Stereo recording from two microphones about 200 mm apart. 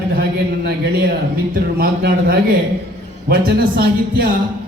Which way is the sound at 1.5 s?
50° right (ahead or behind).